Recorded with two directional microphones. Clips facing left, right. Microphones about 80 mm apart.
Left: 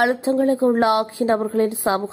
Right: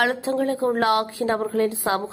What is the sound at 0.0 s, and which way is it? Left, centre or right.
Speech, left.